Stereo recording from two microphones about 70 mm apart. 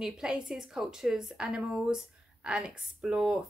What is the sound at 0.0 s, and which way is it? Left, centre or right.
A woman's voice, centre.